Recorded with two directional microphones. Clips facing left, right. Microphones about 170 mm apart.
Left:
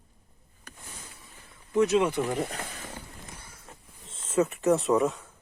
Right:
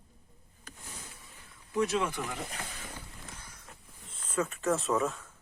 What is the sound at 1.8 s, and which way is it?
Speech, 20° left (ahead or behind).